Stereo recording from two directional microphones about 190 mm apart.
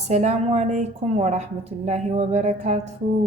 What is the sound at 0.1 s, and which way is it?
A woman's voice, 35° right (ahead or behind).